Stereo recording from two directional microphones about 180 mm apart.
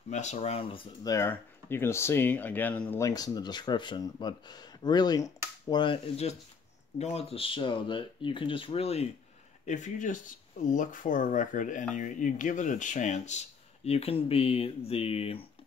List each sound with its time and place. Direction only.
0.1 s speech: 40° left (ahead or behind)
1.1 s speech: 15° left (ahead or behind); by 15.4 s 30° left (ahead or behind)